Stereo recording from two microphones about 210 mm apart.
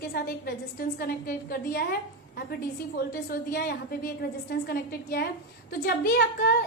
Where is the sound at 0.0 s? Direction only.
50° left (ahead or behind).